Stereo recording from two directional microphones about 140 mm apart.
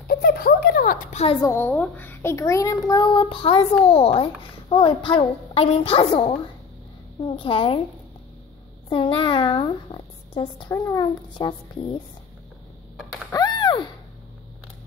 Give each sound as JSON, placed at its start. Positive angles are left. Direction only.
{"t": 0.1, "sound": "a sound", "side_deg": 90}
{"t": 1.6, "sound": "a child's voice", "side_deg": 10}
{"t": 8.8, "sound": "speech", "side_deg": 35}
{"t": 10.7, "sound": "a child's voice", "side_deg": 20}
{"t": 11.3, "sound": "a child's voice", "side_deg": 30}
{"t": 13.3, "sound": "a sound", "side_deg": 30}